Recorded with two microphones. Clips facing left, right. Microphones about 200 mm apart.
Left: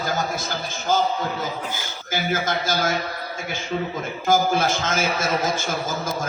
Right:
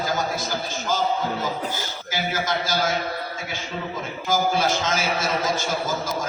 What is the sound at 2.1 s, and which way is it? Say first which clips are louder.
Speech: left 2 dB; 50° left (ahead or behind).